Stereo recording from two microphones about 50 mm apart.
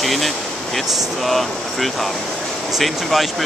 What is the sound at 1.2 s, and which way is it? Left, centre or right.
Speech, centre.